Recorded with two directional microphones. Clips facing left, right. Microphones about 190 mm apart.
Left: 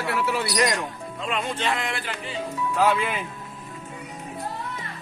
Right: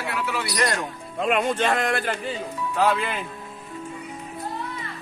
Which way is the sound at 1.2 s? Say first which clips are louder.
Right 7 dB; 55° right (ahead or behind).